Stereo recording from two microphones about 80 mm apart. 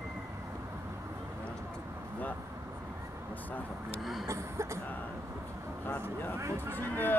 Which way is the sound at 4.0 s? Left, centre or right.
Centre.